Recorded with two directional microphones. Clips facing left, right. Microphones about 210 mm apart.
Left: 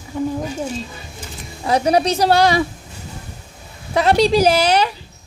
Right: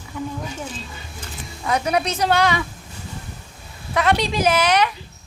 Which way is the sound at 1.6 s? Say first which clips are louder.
Left 5 dB; 35° left (ahead or behind).